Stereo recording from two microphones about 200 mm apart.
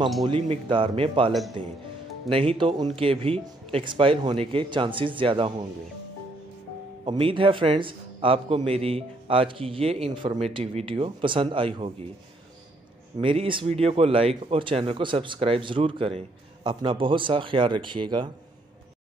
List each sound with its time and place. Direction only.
0.2 s speech: 25° right (ahead or behind)
7.1 s speech: 25° right (ahead or behind)
13.2 s speech: 25° right (ahead or behind)